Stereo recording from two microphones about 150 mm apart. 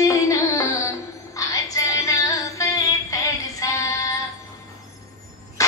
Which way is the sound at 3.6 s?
25° left (ahead or behind).